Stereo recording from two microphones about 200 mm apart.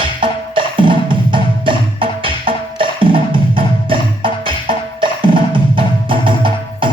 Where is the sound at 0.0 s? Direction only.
25° right (ahead or behind).